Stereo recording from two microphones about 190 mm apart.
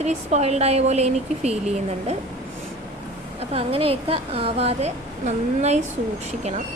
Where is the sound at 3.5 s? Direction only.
30° right (ahead or behind).